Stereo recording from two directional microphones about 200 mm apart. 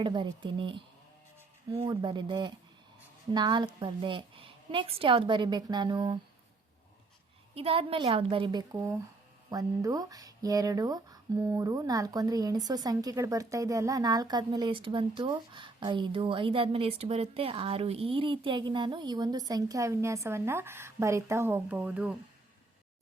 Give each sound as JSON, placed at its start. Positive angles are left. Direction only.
{"t": 0.0, "sound": "speech", "side_deg": -25}
{"t": 7.5, "sound": "speech", "side_deg": -30}